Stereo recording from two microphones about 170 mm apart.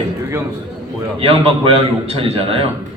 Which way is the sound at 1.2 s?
30° right (ahead or behind).